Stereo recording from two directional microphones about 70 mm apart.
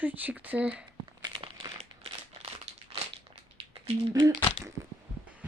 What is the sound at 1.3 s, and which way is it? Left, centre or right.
Crumpling, right.